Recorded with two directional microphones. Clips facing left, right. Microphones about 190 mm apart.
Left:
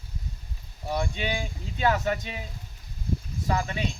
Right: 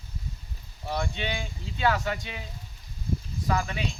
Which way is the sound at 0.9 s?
10° left (ahead or behind).